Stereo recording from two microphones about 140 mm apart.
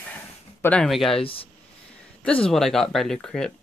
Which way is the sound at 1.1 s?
40° left (ahead or behind).